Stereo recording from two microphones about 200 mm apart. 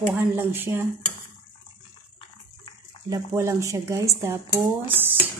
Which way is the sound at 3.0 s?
15° right (ahead or behind).